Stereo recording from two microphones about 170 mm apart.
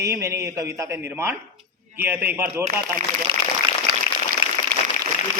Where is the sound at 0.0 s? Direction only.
15° right (ahead or behind).